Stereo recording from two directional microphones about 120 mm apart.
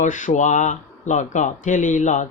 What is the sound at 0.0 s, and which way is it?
Speech, 90° left.